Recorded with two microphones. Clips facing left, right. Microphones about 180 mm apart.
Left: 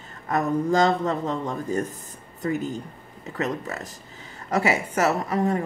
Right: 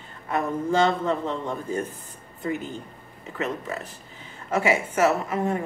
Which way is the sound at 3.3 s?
40° left (ahead or behind).